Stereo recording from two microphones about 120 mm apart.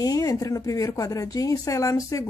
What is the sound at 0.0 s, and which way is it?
A woman's voice, 30° left (ahead or behind).